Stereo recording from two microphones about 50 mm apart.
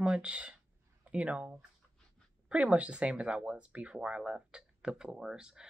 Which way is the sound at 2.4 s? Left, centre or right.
Right.